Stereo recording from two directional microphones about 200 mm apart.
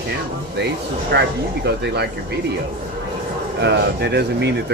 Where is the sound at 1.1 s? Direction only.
55° right (ahead or behind).